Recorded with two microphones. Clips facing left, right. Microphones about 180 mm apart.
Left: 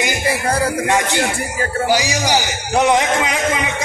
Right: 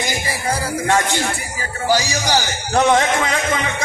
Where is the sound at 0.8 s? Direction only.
15° left (ahead or behind).